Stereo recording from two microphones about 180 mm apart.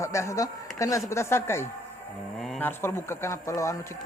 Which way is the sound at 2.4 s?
5° left (ahead or behind).